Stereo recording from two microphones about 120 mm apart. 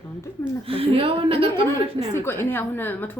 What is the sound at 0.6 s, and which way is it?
A woman's voice, 50° right (ahead or behind).